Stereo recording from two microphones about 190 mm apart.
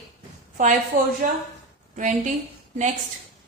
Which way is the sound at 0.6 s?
45° right (ahead or behind).